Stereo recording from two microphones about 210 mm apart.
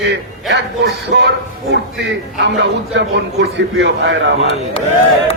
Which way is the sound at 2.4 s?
55° right (ahead or behind).